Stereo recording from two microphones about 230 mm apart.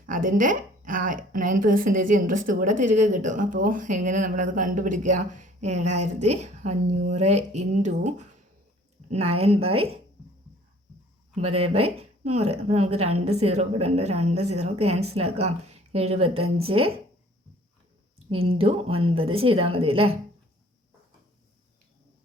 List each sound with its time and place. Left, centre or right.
0.0 s a woman's voice: right
11.3 s a woman's voice: right
18.3 s a woman's voice: right